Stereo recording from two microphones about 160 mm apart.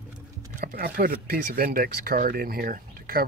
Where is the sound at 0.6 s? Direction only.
65° right (ahead or behind).